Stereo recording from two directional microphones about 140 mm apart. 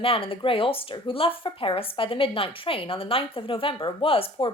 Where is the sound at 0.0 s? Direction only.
40° left (ahead or behind).